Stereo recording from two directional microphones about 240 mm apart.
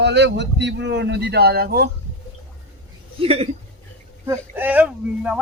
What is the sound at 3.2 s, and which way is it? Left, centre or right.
Speech, right.